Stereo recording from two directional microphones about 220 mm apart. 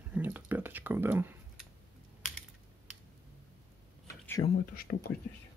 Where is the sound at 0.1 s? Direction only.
10° right (ahead or behind).